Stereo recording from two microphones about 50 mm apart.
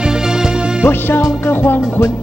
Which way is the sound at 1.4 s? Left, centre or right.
Left.